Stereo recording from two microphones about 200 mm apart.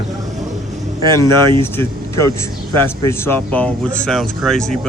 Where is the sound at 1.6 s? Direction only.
10° left (ahead or behind).